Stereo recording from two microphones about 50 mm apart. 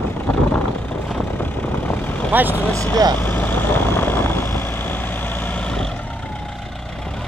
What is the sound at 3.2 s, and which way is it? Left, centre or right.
Vehicle, left.